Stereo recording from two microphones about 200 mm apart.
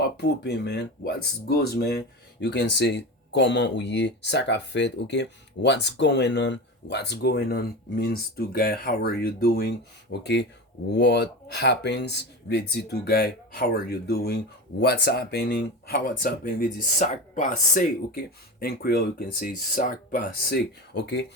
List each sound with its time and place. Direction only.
0.0 s speech: 60° left (ahead or behind)